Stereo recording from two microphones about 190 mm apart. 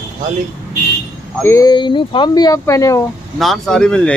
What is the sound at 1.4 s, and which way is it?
Speech, 15° left (ahead or behind).